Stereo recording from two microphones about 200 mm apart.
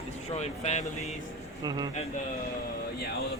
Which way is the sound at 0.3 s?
35° left (ahead or behind).